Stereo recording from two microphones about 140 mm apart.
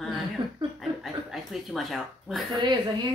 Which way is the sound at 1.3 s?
Centre (ahead or behind).